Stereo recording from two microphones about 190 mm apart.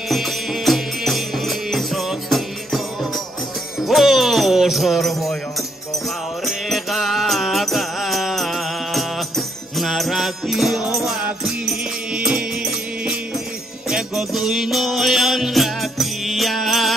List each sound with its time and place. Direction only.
0.1 s music: centre (ahead or behind)
3.8 s jingle bell: centre (ahead or behind)
6.4 s music: centre (ahead or behind)